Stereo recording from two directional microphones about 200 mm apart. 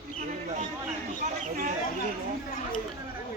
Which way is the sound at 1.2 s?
40° right (ahead or behind).